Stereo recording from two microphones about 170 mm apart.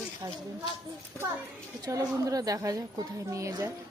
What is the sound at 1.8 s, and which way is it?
A woman's voice, 20° right (ahead or behind).